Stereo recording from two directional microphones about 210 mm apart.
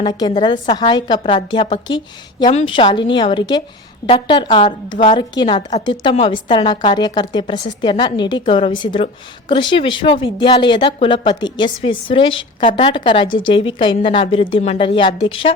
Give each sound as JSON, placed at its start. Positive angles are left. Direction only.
{"t": 0.0, "sound": "a woman's voice", "side_deg": 20}